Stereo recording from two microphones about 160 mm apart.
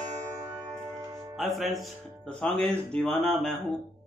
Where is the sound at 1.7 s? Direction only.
Centre (ahead or behind).